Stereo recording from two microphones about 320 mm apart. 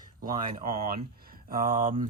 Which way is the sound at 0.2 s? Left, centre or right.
Right.